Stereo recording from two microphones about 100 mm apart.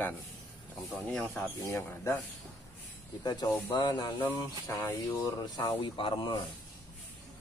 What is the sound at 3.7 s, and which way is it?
Music, 45° left (ahead or behind).